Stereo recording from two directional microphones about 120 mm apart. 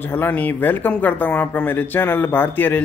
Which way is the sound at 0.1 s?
15° left (ahead or behind).